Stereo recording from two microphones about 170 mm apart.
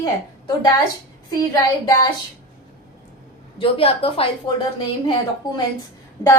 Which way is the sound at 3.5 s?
35° left (ahead or behind).